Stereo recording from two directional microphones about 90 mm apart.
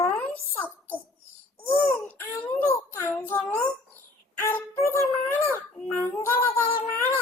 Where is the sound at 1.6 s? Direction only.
25° left (ahead or behind).